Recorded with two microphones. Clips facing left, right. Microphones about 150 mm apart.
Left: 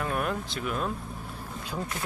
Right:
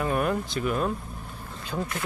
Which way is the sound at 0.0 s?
5° right (ahead or behind).